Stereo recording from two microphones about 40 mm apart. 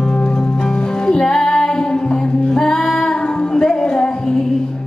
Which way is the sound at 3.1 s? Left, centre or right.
Left.